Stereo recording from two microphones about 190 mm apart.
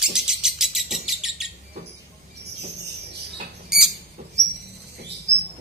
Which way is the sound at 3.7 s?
Centre (ahead or behind).